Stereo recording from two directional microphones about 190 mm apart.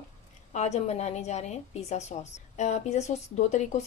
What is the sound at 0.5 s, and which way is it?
Speech, 35° left (ahead or behind).